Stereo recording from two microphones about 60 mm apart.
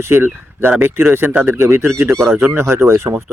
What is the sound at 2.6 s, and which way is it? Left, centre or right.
Speech, right.